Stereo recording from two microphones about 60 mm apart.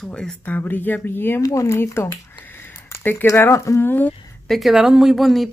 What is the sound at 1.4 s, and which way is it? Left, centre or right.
Speech, left.